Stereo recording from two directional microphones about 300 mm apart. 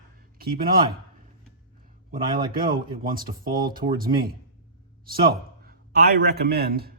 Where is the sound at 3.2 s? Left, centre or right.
Centre.